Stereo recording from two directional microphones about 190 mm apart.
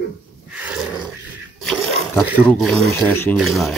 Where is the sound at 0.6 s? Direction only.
5° right (ahead or behind).